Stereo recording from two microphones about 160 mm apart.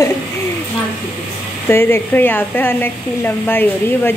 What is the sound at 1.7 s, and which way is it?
Speech, 15° left (ahead or behind).